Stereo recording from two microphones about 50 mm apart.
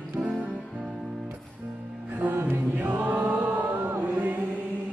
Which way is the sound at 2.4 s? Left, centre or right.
Right.